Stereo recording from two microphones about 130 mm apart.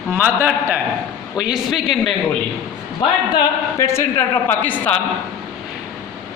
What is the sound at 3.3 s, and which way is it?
A woman's voice, 20° left (ahead or behind).